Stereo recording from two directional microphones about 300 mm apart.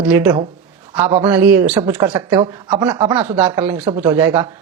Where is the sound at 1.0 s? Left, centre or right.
Right.